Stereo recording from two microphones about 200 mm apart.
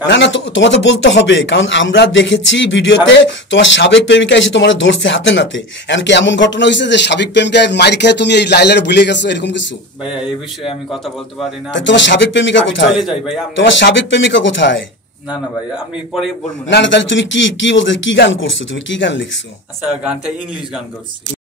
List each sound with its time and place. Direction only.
0.0 s speech: 65° left (ahead or behind)
11.7 s speech: 65° left (ahead or behind)
16.6 s a man's voice: 65° left (ahead or behind)
19.9 s speech: 5° right (ahead or behind)